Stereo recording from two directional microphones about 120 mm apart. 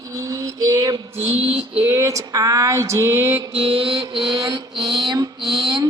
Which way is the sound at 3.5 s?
50° right (ahead or behind).